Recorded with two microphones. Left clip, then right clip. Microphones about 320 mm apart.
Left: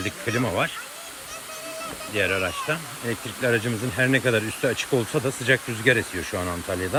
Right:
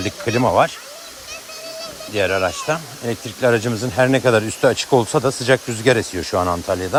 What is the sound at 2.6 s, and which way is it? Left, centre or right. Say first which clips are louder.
Speech: right 5 dB; right.